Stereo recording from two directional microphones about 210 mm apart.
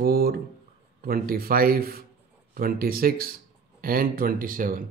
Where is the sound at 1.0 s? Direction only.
45° right (ahead or behind).